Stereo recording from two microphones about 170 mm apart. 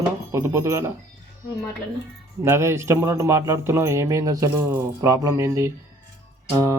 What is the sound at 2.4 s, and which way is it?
Speech, 15° right (ahead or behind).